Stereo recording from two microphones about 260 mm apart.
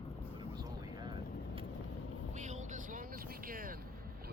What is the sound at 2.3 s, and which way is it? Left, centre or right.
Vehicle, right.